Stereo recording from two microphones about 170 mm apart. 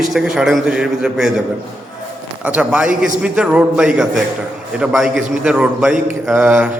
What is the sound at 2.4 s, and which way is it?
A man's voice, 5° right (ahead or behind).